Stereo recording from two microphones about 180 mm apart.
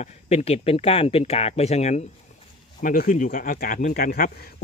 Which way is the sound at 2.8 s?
50° left (ahead or behind).